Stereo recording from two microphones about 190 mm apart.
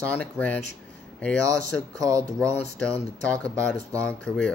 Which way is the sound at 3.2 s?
5° left (ahead or behind).